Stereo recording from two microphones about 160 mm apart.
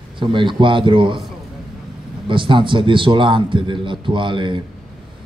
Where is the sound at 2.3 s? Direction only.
30° right (ahead or behind).